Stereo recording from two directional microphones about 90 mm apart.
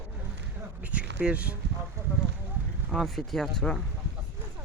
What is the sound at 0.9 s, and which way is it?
Speech, 15° right (ahead or behind).